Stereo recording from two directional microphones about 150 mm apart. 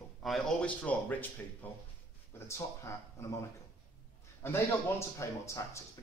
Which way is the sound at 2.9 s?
20° left (ahead or behind).